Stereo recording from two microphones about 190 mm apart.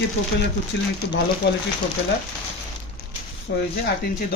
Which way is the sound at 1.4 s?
60° left (ahead or behind).